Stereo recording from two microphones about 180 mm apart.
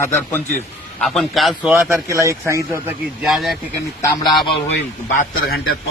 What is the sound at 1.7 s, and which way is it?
A man's voice, 15° right (ahead or behind).